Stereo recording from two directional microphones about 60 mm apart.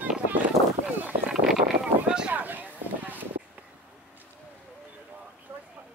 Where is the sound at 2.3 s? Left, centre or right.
Right.